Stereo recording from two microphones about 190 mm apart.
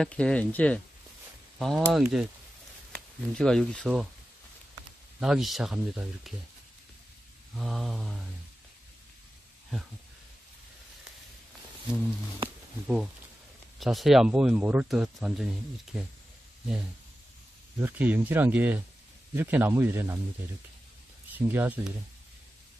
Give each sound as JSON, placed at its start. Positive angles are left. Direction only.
{"t": 0.0, "sound": "speech", "side_deg": 5}
{"t": 5.2, "sound": "speech", "side_deg": 0}
{"t": 7.5, "sound": "speech", "side_deg": 0}
{"t": 12.8, "sound": "speech", "side_deg": 0}
{"t": 17.7, "sound": "speech", "side_deg": -10}
{"t": 21.3, "sound": "speech", "side_deg": -10}